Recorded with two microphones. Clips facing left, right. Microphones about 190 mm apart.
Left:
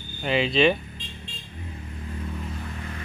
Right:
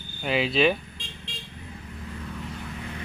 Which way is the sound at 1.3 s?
90° right.